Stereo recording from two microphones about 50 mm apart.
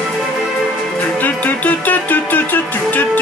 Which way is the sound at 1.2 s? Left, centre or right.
Left.